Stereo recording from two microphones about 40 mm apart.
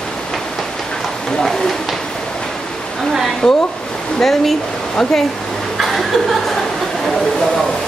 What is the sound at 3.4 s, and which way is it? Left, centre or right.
Speech, centre.